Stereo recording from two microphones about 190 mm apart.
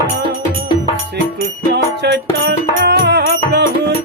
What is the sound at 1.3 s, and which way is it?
Music, 60° right (ahead or behind).